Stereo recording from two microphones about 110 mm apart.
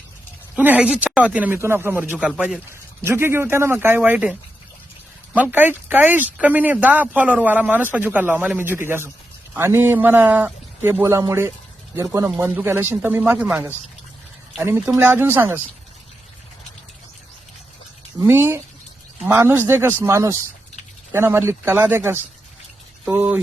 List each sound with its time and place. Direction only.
0.5 s speech: 15° right (ahead or behind)
11.0 s speech: 30° right (ahead or behind)
14.6 s speech: 25° right (ahead or behind)
18.2 s speech: 20° right (ahead or behind)